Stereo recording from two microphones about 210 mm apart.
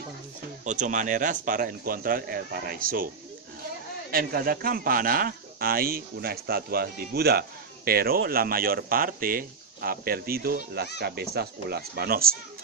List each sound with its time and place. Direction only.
0.7 s speech: 35° right (ahead or behind)
4.1 s speech: 45° right (ahead or behind)